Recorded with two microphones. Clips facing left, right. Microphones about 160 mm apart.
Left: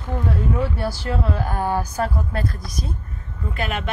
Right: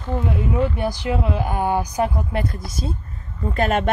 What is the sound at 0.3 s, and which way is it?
Speech, 15° right (ahead or behind).